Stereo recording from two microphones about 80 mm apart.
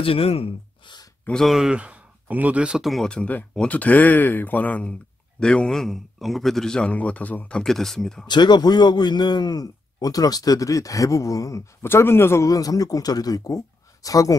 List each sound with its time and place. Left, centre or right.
1.3 s speech: centre
2.8 s speech: centre
3.1 s a man's voice: centre
8.3 s a man's voice: left
11.8 s a man's voice: left
12.4 s a man's voice: left